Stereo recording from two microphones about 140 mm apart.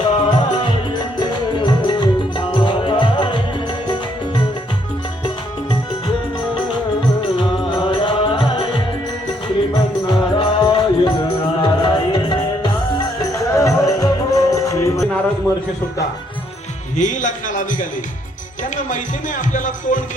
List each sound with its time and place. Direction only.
0.1 s music: 35° left (ahead or behind)
7.3 s music: 35° left (ahead or behind)
10.1 s music: 35° left (ahead or behind)
13.3 s music: 25° left (ahead or behind)
17.0 s a man's voice: 60° left (ahead or behind)
18.9 s music: 65° left (ahead or behind)